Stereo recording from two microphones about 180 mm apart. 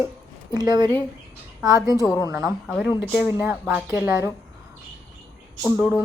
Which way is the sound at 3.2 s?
10° right (ahead or behind).